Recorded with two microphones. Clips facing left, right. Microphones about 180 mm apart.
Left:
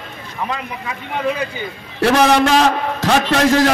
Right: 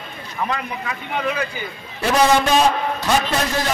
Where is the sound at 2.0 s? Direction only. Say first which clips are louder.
Left 3 dB; 85° left.